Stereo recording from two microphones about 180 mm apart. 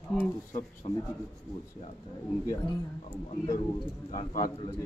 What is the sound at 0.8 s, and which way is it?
Speech, 30° left (ahead or behind).